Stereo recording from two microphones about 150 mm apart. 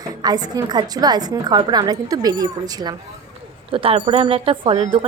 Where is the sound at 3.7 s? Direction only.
40° right (ahead or behind).